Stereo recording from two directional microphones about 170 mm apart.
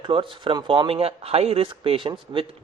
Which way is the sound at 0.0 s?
30° right (ahead or behind).